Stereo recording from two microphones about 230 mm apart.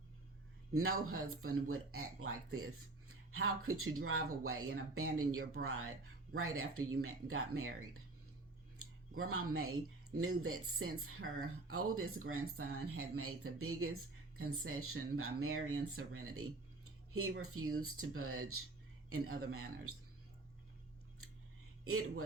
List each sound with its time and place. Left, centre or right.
0.7 s speech: right
8.8 s speech: right